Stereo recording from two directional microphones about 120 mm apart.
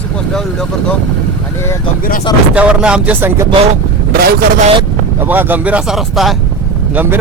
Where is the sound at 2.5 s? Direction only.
10° right (ahead or behind).